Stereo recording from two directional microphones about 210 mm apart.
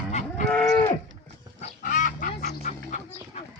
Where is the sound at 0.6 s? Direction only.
15° left (ahead or behind).